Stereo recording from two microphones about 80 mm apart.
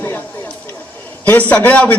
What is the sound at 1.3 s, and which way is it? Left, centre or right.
Speech, centre.